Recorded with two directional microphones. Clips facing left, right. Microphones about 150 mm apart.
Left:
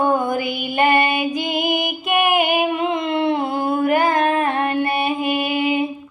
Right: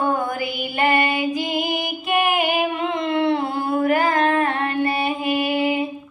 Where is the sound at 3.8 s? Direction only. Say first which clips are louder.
Left 1 dB; 20° left (ahead or behind).